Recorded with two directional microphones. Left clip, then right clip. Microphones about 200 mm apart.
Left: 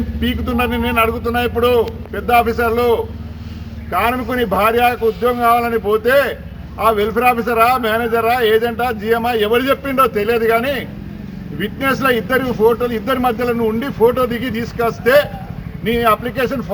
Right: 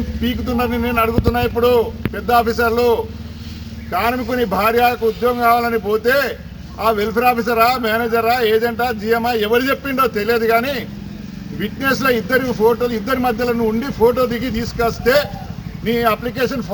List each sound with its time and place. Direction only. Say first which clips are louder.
0.2 s a man's voice: left 1 dB; 10° left (ahead or behind)